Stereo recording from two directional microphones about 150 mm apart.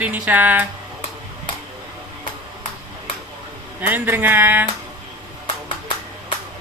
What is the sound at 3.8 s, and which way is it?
Speech, 15° right (ahead or behind).